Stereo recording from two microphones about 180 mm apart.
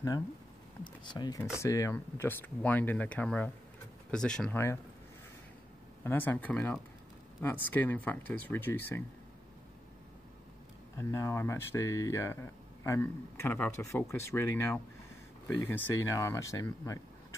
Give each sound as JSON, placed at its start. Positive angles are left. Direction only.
{"t": 1.1, "sound": "speech", "side_deg": 20}
{"t": 6.0, "sound": "speech", "side_deg": 10}
{"t": 11.0, "sound": "speech", "side_deg": 15}